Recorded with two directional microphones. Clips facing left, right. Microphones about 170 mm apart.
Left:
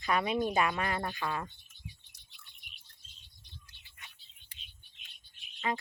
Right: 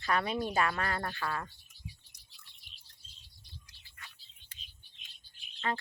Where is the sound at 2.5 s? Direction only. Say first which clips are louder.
Left 3 dB; 30° right (ahead or behind).